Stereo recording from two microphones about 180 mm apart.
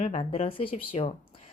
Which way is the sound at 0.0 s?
35° left (ahead or behind).